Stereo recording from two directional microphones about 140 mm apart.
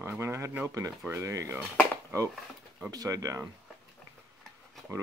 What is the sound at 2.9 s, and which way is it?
Speech, 25° right (ahead or behind).